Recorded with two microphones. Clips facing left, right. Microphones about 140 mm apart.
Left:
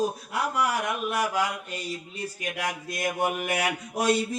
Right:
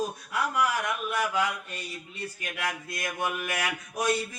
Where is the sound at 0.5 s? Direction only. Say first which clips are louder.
Left 1 dB; 35° left (ahead or behind).